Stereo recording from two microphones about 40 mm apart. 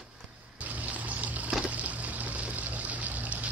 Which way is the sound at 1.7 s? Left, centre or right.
Right.